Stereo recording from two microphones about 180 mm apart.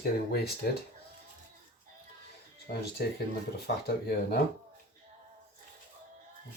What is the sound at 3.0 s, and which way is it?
Speech, 60° left (ahead or behind).